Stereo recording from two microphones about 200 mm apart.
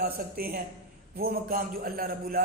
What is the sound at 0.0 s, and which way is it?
A man's voice, 45° right (ahead or behind).